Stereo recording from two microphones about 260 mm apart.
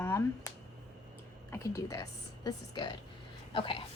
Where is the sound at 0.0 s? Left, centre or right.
Centre.